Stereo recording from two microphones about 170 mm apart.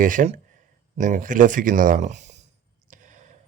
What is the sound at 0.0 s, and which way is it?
Speech, 50° right (ahead or behind).